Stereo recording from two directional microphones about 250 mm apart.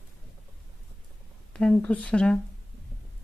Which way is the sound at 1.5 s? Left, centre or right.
Centre.